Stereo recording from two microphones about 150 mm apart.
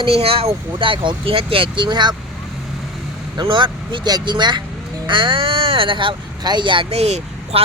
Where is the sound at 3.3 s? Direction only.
30° right (ahead or behind).